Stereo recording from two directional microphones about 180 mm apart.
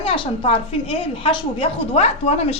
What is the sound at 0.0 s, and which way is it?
A woman's voice, 30° left (ahead or behind).